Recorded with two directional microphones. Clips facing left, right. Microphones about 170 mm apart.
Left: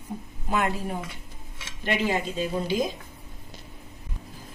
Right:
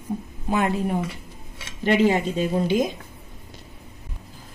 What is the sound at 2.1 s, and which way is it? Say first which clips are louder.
Speech: right 5 dB; 45° right (ahead or behind).